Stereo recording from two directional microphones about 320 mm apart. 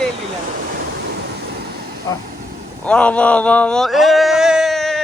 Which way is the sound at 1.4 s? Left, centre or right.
Right.